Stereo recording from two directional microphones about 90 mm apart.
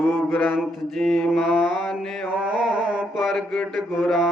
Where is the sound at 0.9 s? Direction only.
5° left (ahead or behind).